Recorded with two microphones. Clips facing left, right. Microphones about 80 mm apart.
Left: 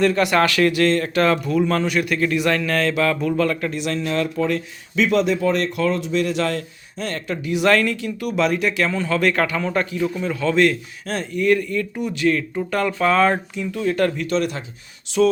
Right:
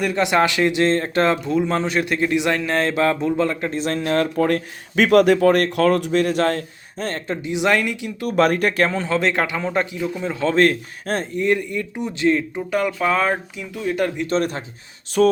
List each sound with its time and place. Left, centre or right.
0.0 s speech: centre; by 7.3 s right
7.4 s speech: centre
8.2 s speech: right; by 10.3 s centre
10.4 s a man's voice: right
11.3 s speech: right
12.5 s speech: centre
14.3 s a man's voice: right
15.2 s a sound: right